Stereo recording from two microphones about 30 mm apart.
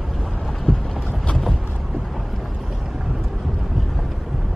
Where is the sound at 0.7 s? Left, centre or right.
Left.